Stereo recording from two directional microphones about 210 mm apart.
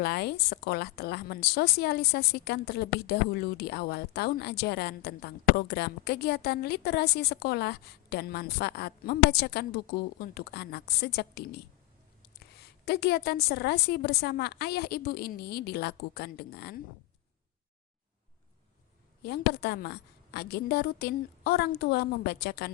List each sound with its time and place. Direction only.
0.0 s a woman's voice: 50° left (ahead or behind)
19.2 s a woman's voice: 50° left (ahead or behind)